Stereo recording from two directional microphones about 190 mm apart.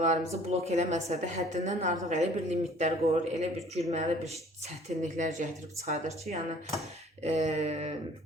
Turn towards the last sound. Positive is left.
turn(degrees=-35)  # may be behind; listen again after turning